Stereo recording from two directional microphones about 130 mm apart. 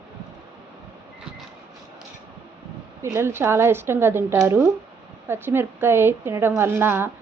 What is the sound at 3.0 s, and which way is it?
A woman's voice, 20° right (ahead or behind).